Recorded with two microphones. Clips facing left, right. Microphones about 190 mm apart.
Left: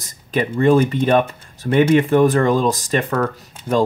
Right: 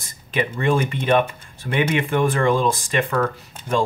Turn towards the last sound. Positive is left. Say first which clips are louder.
# left 4 dB
turn(degrees=40)  # may be behind; listen again after turning